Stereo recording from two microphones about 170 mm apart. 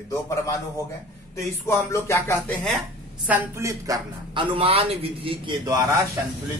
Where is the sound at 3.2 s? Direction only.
10° right (ahead or behind).